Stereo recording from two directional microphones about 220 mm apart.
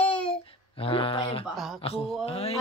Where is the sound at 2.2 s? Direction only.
25° left (ahead or behind).